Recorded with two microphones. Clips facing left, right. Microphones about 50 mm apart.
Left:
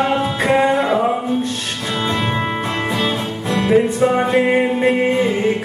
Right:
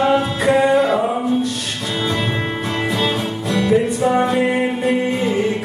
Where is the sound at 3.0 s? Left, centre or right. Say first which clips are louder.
Even; left.